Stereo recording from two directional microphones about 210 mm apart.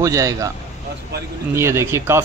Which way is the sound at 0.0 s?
15° right (ahead or behind).